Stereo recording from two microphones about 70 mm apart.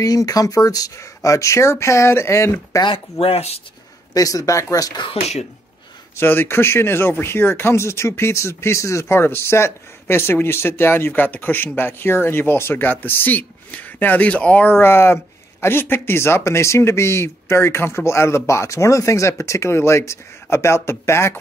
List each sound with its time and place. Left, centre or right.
0.0 s speech: left
4.1 s speech: left
6.1 s speech: left